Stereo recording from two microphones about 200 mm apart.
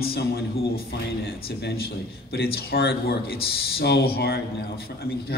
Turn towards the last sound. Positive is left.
turn(degrees=55)  # may be behind; listen again after turning